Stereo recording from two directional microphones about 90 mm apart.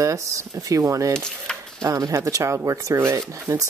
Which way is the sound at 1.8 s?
40° right (ahead or behind).